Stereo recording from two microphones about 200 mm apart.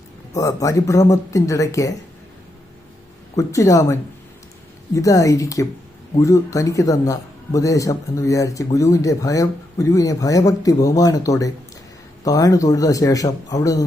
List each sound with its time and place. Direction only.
0.3 s speech: 15° left (ahead or behind)
3.3 s speech: 15° left (ahead or behind)
4.9 s speech: 15° left (ahead or behind)